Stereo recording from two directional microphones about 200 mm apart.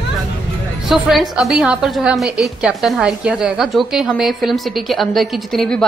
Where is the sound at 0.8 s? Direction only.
Centre (ahead or behind).